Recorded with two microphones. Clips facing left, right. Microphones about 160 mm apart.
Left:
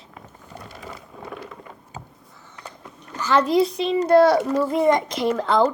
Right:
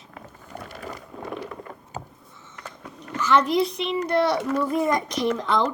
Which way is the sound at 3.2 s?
35° left (ahead or behind).